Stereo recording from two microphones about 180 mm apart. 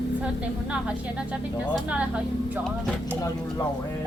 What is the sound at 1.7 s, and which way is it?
Speech, 5° right (ahead or behind).